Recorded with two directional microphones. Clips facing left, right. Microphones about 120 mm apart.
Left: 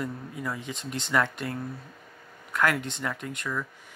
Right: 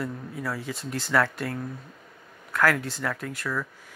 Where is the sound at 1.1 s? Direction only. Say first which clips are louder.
Right 2 dB; 10° left (ahead or behind).